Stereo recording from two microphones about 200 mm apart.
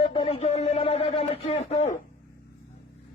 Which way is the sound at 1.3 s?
30° left (ahead or behind).